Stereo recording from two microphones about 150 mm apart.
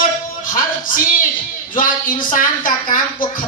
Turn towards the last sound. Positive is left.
turn(degrees=65)  # may be behind; listen again after turning